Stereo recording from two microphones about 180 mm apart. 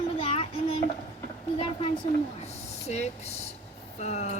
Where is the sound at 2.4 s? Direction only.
40° left (ahead or behind).